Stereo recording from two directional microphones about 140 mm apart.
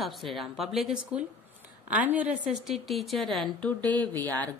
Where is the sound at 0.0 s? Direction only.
Centre (ahead or behind).